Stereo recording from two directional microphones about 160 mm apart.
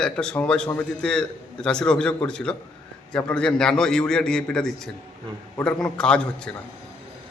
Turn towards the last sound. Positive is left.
turn(degrees=5)  # may be behind; listen again after turning